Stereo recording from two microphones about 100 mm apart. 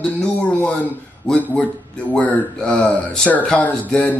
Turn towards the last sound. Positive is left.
turn(degrees=15)  # may be behind; listen again after turning